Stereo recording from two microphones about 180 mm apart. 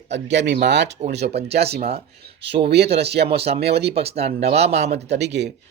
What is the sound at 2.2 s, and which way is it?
Speech, 70° right (ahead or behind).